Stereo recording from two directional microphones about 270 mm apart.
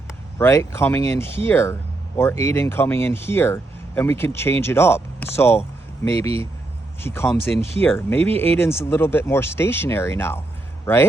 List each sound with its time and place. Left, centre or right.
0.3 s speech: centre
8.3 s speech: right
8.8 s speech: centre